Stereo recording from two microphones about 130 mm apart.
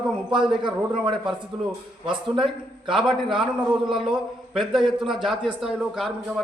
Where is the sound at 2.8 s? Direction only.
40° right (ahead or behind).